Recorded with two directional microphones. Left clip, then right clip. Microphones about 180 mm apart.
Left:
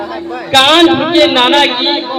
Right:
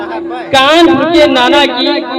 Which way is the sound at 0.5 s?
10° left (ahead or behind).